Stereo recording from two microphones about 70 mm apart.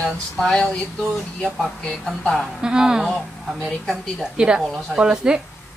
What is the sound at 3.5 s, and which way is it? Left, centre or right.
Speech, centre.